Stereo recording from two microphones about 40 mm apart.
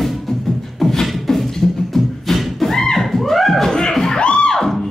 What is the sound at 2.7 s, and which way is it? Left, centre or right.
Music, centre.